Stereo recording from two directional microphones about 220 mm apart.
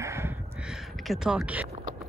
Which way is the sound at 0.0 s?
10° right (ahead or behind).